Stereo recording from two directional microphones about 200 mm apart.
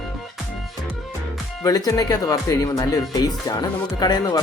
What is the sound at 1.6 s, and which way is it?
Speech, 20° left (ahead or behind).